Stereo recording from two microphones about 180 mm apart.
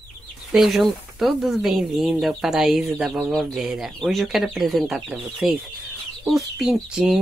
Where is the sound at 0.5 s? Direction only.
Centre (ahead or behind).